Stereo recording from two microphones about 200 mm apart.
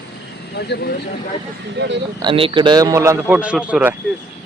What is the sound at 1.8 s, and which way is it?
Speech, 55° right (ahead or behind).